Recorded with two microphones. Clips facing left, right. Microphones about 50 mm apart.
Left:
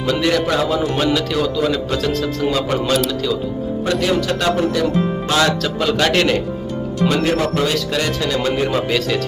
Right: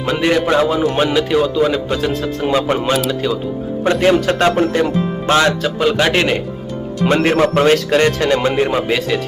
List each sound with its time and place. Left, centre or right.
0.0 s a man's voice: right
5.6 s a man's voice: centre
7.0 s speech: right
8.4 s a man's voice: right